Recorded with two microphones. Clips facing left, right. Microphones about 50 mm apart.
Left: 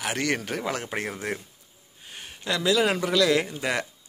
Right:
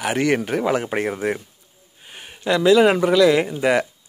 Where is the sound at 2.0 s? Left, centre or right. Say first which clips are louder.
Right 8 dB; centre.